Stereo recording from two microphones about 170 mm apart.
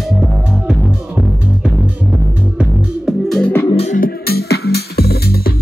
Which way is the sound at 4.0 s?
65° left (ahead or behind).